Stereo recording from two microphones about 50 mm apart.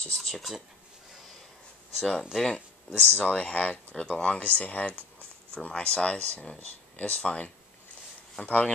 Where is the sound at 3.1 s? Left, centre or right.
Left.